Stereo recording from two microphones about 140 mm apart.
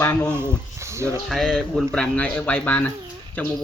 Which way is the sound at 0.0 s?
10° left (ahead or behind).